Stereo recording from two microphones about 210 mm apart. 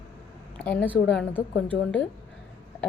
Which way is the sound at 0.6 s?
5° left (ahead or behind).